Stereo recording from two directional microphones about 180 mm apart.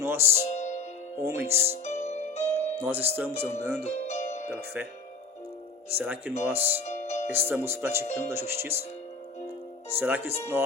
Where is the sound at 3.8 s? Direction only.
40° left (ahead or behind).